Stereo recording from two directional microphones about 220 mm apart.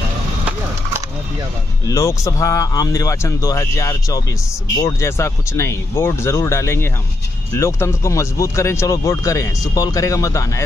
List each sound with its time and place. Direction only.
1.9 s speech: 15° left (ahead or behind)